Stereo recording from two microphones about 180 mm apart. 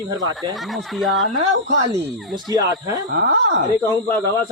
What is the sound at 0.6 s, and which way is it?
Speech, centre (ahead or behind).